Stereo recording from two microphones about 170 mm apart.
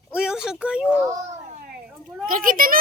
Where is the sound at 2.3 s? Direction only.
55° right (ahead or behind).